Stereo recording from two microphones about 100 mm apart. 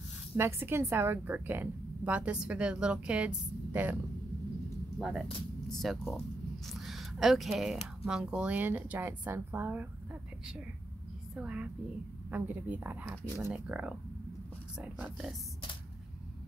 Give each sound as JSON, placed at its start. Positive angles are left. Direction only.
{"t": 0.4, "sound": "a woman's voice", "side_deg": -25}
{"t": 5.0, "sound": "a woman's voice", "side_deg": -5}
{"t": 11.3, "sound": "a woman's voice", "side_deg": -10}